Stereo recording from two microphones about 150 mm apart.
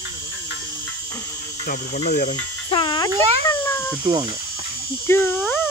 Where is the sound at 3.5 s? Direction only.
15° left (ahead or behind).